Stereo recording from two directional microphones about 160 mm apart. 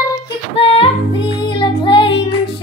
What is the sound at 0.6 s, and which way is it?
Music, 35° left (ahead or behind).